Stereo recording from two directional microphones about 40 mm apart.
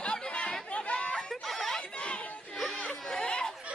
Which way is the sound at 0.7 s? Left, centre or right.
Left.